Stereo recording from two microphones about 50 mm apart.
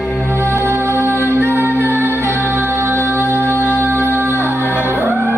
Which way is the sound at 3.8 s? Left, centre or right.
Right.